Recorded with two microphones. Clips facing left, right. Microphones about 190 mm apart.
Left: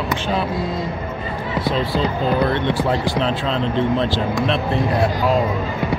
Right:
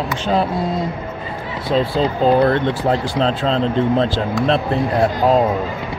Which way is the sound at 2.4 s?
40° right (ahead or behind).